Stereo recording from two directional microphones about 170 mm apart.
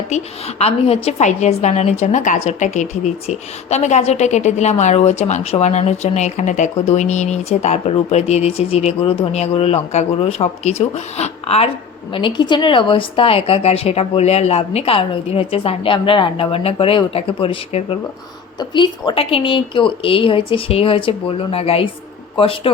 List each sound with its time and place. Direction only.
0.6 s a woman's voice: 35° left (ahead or behind)